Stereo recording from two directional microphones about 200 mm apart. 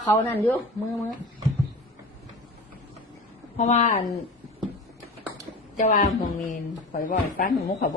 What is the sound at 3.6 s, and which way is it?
Speech, 35° left (ahead or behind).